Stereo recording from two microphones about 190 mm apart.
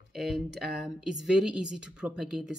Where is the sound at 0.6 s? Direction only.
Centre (ahead or behind).